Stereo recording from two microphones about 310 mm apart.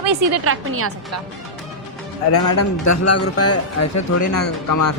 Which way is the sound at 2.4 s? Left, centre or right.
Left.